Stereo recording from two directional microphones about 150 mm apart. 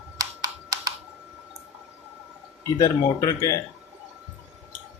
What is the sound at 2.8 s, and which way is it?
Speech, 20° left (ahead or behind).